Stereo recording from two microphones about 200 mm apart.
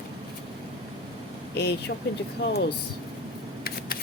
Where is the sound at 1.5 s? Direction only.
55° left (ahead or behind).